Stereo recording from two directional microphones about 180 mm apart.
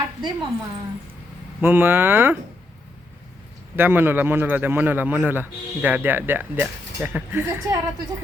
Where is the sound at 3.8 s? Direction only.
10° right (ahead or behind).